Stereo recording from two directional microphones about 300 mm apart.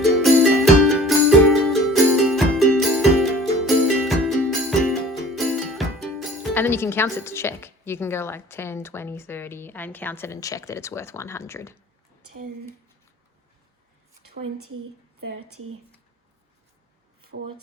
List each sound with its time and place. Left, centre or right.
0.2 s music: centre
15.3 s a woman's voice: right